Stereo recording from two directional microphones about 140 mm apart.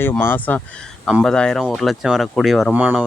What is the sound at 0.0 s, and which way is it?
Speech, 15° left (ahead or behind).